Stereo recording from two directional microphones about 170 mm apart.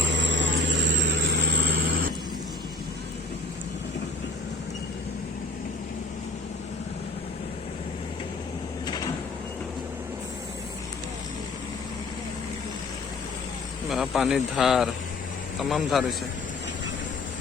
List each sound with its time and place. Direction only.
0.0 s vehicle: 90° right
13.9 s speech: centre (ahead or behind)